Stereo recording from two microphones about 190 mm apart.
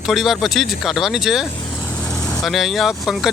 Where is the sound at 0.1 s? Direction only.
Centre (ahead or behind).